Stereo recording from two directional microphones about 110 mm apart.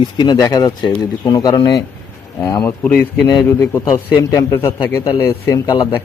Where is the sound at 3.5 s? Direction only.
25° left (ahead or behind).